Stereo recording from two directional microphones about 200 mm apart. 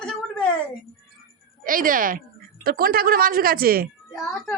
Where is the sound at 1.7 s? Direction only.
45° right (ahead or behind).